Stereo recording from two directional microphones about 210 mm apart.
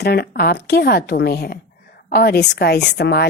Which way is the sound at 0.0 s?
50° left (ahead or behind).